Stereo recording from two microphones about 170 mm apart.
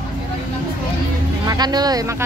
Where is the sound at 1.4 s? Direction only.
25° right (ahead or behind).